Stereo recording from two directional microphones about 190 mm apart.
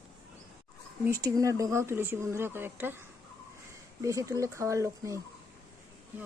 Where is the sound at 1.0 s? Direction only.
20° right (ahead or behind).